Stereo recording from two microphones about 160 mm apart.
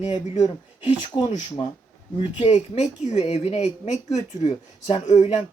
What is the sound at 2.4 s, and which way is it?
A woman's voice, 40° left (ahead or behind).